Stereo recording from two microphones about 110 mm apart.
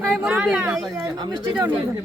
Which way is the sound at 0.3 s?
10° right (ahead or behind).